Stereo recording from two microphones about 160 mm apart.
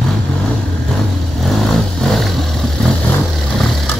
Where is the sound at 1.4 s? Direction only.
Centre (ahead or behind).